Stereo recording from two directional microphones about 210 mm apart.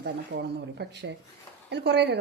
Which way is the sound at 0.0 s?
55° right (ahead or behind).